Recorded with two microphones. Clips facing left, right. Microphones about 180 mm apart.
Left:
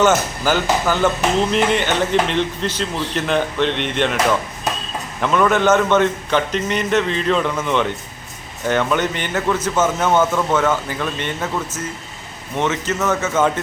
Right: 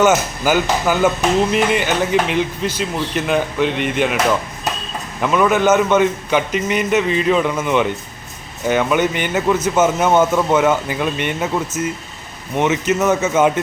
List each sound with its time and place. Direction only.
0.0 s speech: 10° right (ahead or behind)